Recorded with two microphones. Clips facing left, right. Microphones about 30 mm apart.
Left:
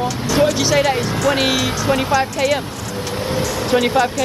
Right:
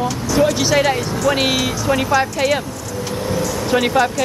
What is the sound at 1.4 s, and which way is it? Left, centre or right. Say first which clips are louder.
Speech: even; centre.